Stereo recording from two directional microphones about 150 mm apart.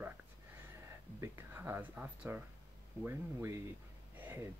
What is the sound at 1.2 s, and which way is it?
Speech, 15° right (ahead or behind).